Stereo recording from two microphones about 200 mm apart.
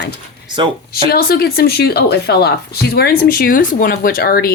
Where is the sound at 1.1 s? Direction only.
50° left (ahead or behind).